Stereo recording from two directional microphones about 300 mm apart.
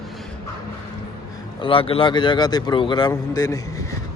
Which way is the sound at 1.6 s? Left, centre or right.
Centre.